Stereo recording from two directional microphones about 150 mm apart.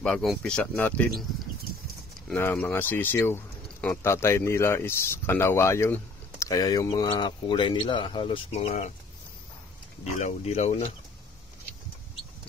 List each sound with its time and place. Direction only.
0.0 s speech: 5° left (ahead or behind)
2.3 s speech: 15° left (ahead or behind); by 8.5 s 35° left (ahead or behind)
8.5 s speech: 50° left (ahead or behind)
10.1 s speech: 50° left (ahead or behind)